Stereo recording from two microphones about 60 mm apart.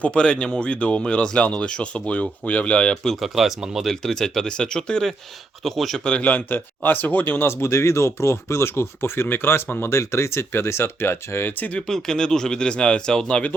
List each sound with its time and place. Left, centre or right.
0.0 s speech: centre
3.2 s speech: centre
3.8 s speech: centre
5.6 s speech: centre
6.1 s speech: left
7.4 s speech: left
9.9 s speech: left
11.9 s speech: centre